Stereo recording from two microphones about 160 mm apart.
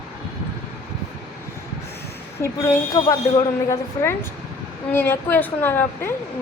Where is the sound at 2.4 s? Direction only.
20° left (ahead or behind).